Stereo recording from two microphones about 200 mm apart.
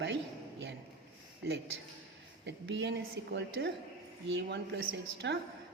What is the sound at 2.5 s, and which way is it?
A woman's voice, 60° right (ahead or behind).